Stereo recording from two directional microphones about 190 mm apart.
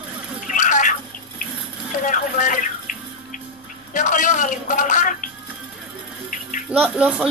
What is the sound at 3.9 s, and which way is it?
Music, 40° left (ahead or behind).